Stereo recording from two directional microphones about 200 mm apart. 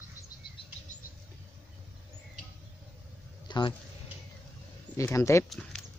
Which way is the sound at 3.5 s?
25° left (ahead or behind).